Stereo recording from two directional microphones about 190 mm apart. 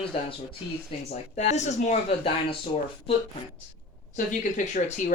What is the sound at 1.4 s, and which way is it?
Speech, 35° left (ahead or behind).